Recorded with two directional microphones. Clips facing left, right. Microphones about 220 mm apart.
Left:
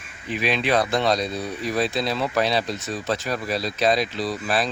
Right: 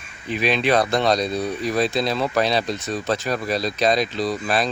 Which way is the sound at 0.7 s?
45° right (ahead or behind).